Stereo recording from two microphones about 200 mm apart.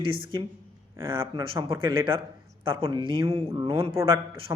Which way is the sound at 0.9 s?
10° right (ahead or behind).